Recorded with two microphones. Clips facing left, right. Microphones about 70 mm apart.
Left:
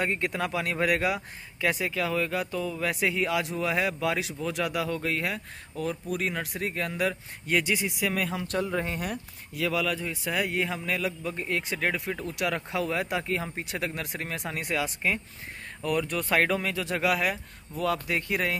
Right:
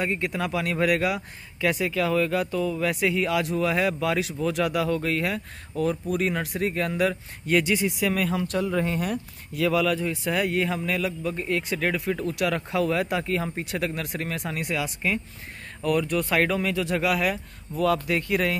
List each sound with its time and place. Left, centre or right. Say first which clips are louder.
0.0 s speech: right 1 dB; left; by 9.7 s centre
9.7 s speech: right 6 dB; centre; by 18.6 s left